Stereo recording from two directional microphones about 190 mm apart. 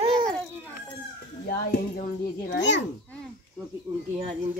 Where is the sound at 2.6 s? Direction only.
70° left (ahead or behind).